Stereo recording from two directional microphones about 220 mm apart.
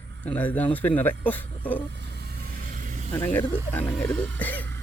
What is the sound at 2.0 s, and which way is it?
Vehicle, 50° right (ahead or behind).